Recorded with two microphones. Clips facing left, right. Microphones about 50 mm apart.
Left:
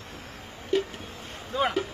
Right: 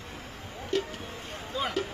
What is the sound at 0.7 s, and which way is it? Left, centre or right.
Music, centre.